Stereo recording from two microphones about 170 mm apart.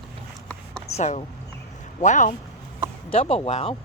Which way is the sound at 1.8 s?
45° left (ahead or behind).